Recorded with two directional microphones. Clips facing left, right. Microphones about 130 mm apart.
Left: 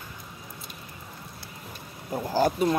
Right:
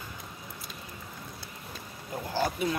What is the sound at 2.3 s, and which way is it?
Speech, 45° left (ahead or behind).